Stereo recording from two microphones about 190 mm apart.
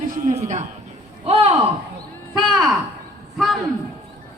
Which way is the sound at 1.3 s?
30° right (ahead or behind).